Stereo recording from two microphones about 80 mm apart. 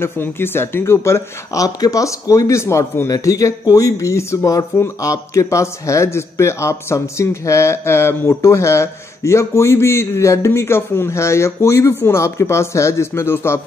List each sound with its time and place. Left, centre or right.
0.0 s speech: left